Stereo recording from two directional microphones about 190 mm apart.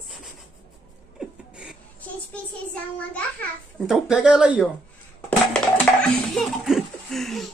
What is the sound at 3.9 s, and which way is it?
Speech, 5° right (ahead or behind).